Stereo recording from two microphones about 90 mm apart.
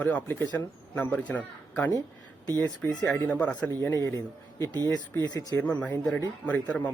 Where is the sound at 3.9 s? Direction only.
35° left (ahead or behind).